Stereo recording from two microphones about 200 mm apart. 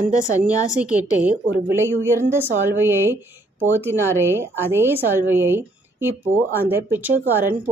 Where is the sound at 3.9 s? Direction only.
10° left (ahead or behind).